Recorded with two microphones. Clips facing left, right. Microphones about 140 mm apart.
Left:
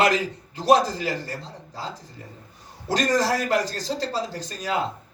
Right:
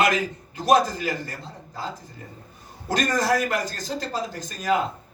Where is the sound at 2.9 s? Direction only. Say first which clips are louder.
Left 1 dB; 35° left (ahead or behind).